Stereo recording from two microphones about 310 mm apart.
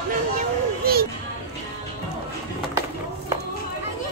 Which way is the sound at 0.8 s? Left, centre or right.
Right.